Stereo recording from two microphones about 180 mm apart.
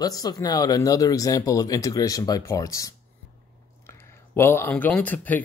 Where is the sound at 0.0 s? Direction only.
20° left (ahead or behind).